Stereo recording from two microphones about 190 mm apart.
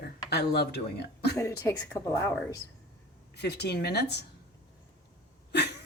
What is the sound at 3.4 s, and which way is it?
Speech, 60° left (ahead or behind).